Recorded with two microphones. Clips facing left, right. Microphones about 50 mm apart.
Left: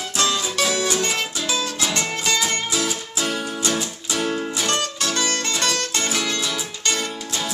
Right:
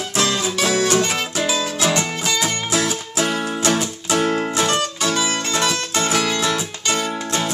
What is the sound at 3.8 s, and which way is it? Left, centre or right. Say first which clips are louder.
Music: right 5 dB; right.